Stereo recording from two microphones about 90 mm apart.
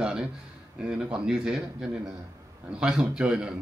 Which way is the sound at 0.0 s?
10° right (ahead or behind).